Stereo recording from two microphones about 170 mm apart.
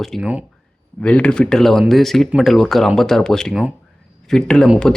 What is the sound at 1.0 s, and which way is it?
Speech, 5° left (ahead or behind).